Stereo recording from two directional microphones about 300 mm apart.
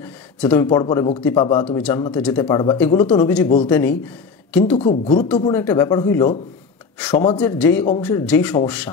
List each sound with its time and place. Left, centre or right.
0.0 s a sound: centre
0.7 s speech: centre
1.8 s a woman's voice: centre
4.7 s speech: left
5.4 s speech: centre
7.3 s speech: centre